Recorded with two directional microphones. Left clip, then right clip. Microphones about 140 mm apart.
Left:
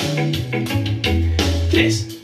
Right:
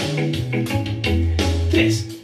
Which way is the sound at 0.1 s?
30° left (ahead or behind).